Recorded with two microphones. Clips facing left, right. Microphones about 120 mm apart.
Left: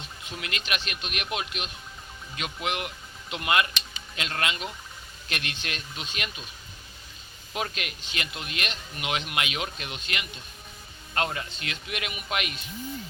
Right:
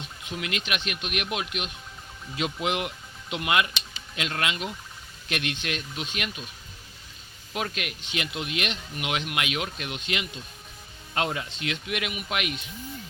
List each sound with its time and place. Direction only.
0.3 s speech: 10° right (ahead or behind)
2.3 s speech: 20° right (ahead or behind)
3.2 s speech: 5° right (ahead or behind)
7.5 s speech: 5° right (ahead or behind)
11.1 s speech: 10° right (ahead or behind)
11.5 s speech: 90° right
11.9 s speech: 5° right (ahead or behind)